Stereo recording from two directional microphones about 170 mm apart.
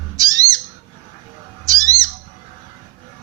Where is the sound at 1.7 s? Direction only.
20° right (ahead or behind).